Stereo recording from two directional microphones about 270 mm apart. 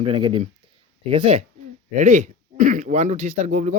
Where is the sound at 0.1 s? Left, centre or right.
Centre.